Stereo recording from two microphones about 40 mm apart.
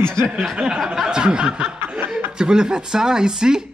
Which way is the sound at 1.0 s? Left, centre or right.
Right.